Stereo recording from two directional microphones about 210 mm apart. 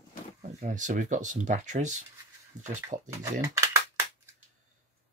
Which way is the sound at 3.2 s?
15° right (ahead or behind).